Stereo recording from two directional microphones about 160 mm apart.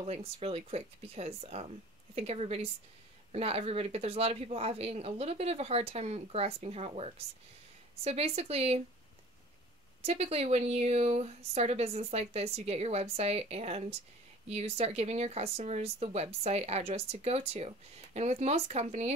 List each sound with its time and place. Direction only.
0.0 s speech: 40° right (ahead or behind)
10.0 s speech: 40° right (ahead or behind)